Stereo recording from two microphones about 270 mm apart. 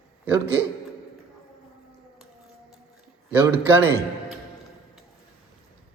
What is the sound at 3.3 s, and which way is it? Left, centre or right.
A man's voice, centre.